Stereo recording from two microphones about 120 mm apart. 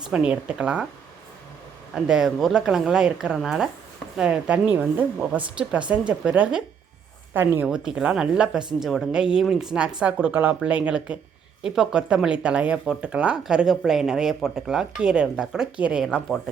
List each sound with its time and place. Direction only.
0.1 s a woman's voice: 10° right (ahead or behind)
2.0 s a woman's voice: 5° right (ahead or behind)
7.7 s a woman's voice: 5° right (ahead or behind)